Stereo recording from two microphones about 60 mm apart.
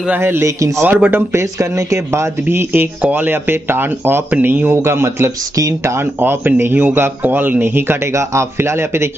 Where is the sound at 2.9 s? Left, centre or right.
Right.